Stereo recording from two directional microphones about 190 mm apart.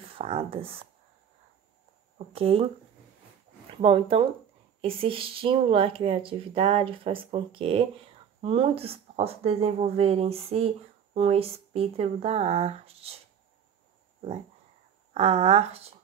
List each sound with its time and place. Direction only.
0.1 s speech: 30° right (ahead or behind)
2.1 s speech: 30° right (ahead or behind)
3.7 s speech: 30° right (ahead or behind)
15.1 s speech: 30° right (ahead or behind)